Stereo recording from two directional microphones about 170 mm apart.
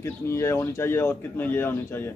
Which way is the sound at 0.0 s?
15° left (ahead or behind).